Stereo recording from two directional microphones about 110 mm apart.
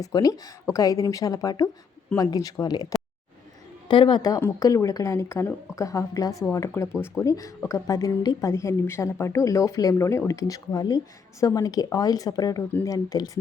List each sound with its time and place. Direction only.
0.0 s a woman's voice: 35° left (ahead or behind)
3.8 s a woman's voice: 45° left (ahead or behind)